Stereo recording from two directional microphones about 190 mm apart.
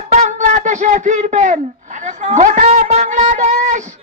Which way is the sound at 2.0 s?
40° right (ahead or behind).